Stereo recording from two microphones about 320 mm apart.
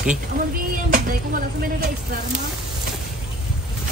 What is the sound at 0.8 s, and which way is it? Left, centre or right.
Speech, right.